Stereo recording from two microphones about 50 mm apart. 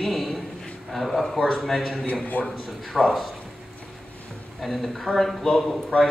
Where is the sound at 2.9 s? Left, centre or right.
Centre.